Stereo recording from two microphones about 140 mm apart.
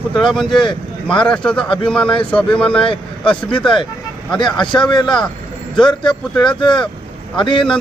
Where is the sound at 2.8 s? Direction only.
40° left (ahead or behind).